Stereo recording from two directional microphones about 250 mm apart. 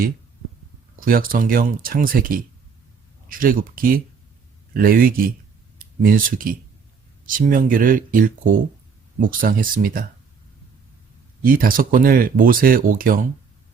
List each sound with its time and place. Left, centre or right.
0.9 s speech: right
11.4 s speech: right